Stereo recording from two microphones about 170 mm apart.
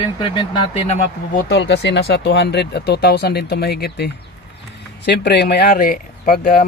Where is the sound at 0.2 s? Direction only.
25° left (ahead or behind).